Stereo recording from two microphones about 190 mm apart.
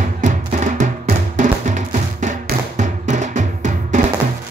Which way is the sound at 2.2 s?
40° right (ahead or behind).